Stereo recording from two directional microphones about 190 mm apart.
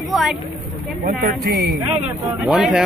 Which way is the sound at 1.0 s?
50° right (ahead or behind).